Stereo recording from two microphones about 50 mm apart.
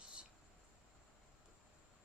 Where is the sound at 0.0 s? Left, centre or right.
Right.